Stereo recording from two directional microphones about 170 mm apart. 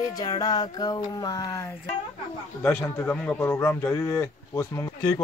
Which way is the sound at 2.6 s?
15° left (ahead or behind).